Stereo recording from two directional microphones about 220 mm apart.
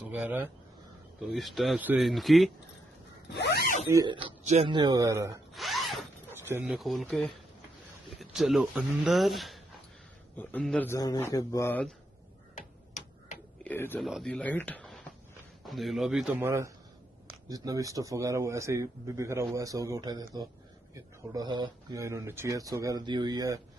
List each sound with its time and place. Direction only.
0.0 s speech: 5° right (ahead or behind)
3.3 s speech: 45° left (ahead or behind)
3.9 s speech: 20° right (ahead or behind)
5.5 s zipper: centre (ahead or behind)
6.3 s a man's voice: 10° right (ahead or behind); by 11.9 s 10° left (ahead or behind)
12.5 s tick-tock: 35° left (ahead or behind)
13.7 s a sound: 10° left (ahead or behind)
13.9 s speech: centre (ahead or behind); by 23.6 s 15° right (ahead or behind)